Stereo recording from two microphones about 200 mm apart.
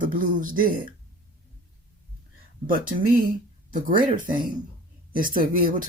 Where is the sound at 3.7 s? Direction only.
40° right (ahead or behind).